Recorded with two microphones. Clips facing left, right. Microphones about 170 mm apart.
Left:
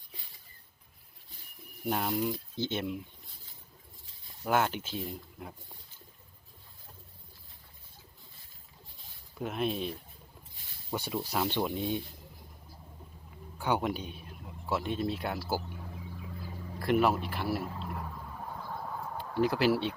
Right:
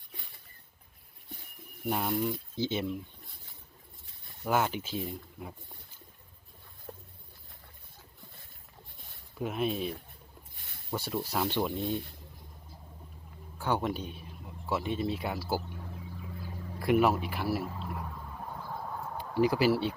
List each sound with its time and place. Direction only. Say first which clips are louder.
1.9 s speech: even; centre (ahead or behind)
4.4 s speech: even; centre (ahead or behind)
9.4 s speech: right 1 dB; 5° right (ahead or behind)
10.9 s speech: even; centre (ahead or behind)
13.6 s speech: even; centre (ahead or behind)
15.4 s a sound: right 1 dB; 5° left (ahead or behind)
19.1 s speech: right 2 dB; 10° right (ahead or behind)